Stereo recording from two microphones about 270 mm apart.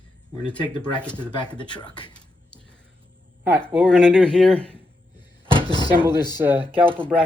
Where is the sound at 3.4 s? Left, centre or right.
Centre.